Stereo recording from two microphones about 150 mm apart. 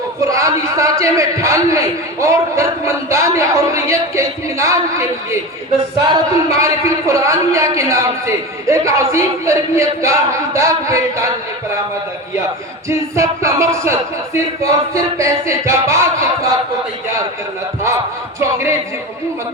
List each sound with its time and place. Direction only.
0.3 s speech: 20° right (ahead or behind)
12.9 s speech: 20° right (ahead or behind)